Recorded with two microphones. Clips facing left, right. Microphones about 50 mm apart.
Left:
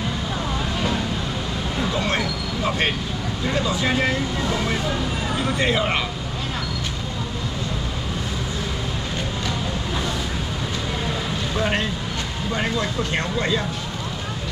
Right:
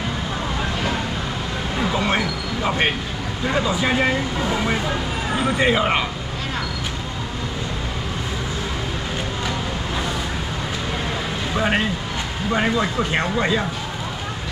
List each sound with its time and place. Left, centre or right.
1.8 s a sound: centre
3.4 s speech: centre
11.5 s speech: centre